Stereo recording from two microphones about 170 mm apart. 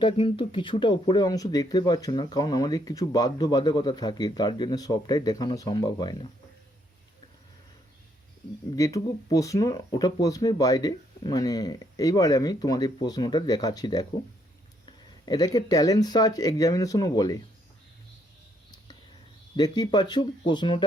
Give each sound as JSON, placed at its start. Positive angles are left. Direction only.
{"t": 0.0, "sound": "speech", "side_deg": 30}
{"t": 8.7, "sound": "speech", "side_deg": 20}
{"t": 19.5, "sound": "speech", "side_deg": 25}